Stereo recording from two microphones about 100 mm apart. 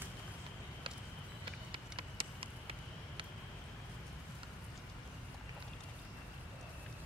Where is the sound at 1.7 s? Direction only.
60° right (ahead or behind).